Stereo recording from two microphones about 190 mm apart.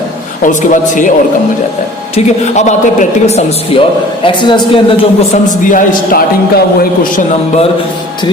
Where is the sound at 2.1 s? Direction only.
35° left (ahead or behind).